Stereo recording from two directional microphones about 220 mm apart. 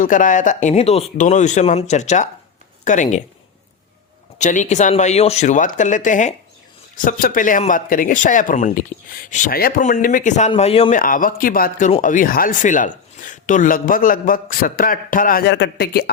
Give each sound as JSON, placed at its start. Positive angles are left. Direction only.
{"t": 0.0, "sound": "speech", "side_deg": 35}
{"t": 4.4, "sound": "speech", "side_deg": 35}
{"t": 11.0, "sound": "speech", "side_deg": 40}